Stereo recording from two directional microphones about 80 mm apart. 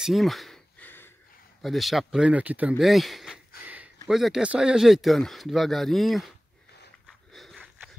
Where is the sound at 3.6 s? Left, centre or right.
Right.